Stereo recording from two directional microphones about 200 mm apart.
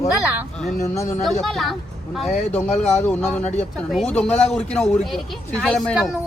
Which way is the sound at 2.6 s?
35° left (ahead or behind).